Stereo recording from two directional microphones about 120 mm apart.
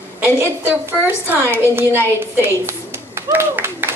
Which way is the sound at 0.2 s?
20° right (ahead or behind).